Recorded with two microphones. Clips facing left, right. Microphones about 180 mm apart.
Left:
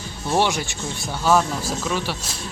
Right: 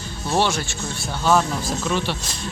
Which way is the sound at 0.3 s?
15° left (ahead or behind).